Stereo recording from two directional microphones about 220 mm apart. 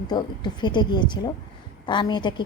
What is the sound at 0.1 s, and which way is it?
A woman's voice, 20° left (ahead or behind).